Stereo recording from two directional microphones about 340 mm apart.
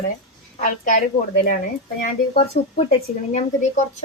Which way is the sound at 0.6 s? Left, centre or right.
Left.